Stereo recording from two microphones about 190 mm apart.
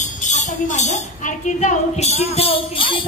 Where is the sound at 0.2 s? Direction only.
40° left (ahead or behind).